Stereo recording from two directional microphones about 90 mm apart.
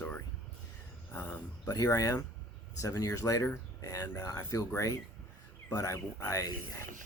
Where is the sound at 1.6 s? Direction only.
40° left (ahead or behind).